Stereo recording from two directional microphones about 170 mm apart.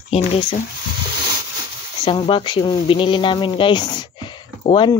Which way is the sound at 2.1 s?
30° left (ahead or behind).